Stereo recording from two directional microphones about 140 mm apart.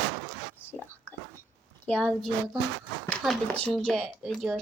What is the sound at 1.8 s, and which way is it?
A child's voice, 10° left (ahead or behind).